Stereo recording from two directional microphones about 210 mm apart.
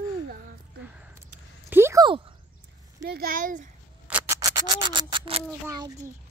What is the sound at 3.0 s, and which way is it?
Speech, 45° right (ahead or behind).